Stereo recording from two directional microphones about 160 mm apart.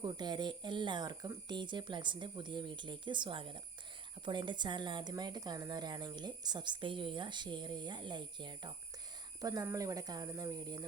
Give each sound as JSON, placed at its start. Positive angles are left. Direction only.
{"t": 0.0, "sound": "a woman's voice", "side_deg": -25}